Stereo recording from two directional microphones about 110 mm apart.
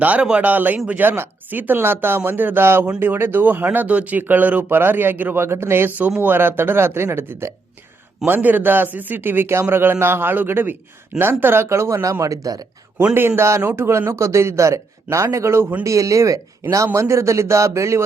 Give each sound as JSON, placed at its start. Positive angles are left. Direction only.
{"t": 0.0, "sound": "a man's voice", "side_deg": -10}
{"t": 13.0, "sound": "a man's voice", "side_deg": -15}